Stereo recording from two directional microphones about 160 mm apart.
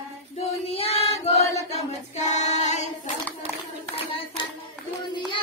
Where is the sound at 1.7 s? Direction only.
45° left (ahead or behind).